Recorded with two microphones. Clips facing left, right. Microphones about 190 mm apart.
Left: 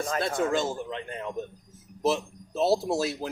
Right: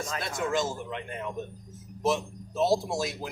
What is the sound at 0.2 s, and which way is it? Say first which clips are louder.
Speech: left 2 dB; 30° left (ahead or behind).